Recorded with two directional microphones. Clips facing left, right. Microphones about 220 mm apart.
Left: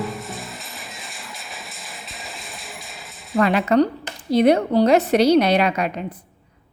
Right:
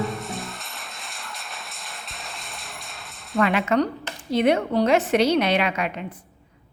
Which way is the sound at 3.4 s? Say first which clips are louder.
Left 4 dB; 35° left (ahead or behind).